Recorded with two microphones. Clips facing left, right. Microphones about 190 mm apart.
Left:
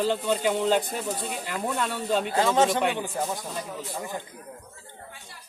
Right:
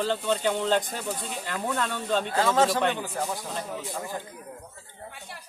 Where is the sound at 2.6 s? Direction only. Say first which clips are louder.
Left 1 dB; 20° left (ahead or behind).